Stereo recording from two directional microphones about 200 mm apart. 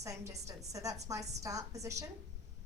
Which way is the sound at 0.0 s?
15° right (ahead or behind).